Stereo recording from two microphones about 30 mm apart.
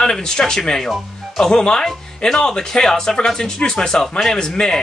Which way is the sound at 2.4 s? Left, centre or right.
Left.